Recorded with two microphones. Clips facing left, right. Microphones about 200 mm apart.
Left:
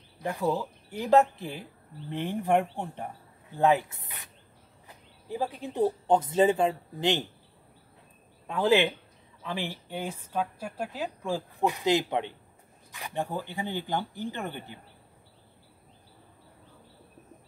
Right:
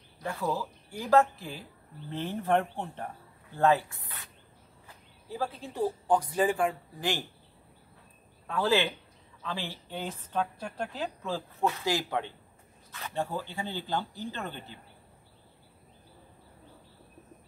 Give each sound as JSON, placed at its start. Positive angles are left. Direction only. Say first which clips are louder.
{"t": 0.2, "sound": "a woman's voice", "louder": "left 3 dB", "side_deg": 15}
{"t": 8.5, "sound": "a woman's voice", "louder": "left 3 dB", "side_deg": 20}